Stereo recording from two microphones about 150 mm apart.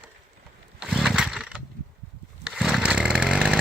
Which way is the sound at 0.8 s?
Centre (ahead or behind).